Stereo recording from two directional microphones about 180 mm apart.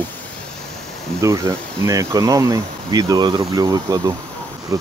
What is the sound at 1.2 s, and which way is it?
Speech, 15° right (ahead or behind).